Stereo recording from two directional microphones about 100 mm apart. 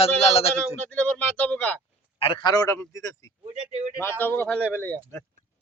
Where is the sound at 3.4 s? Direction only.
75° right (ahead or behind).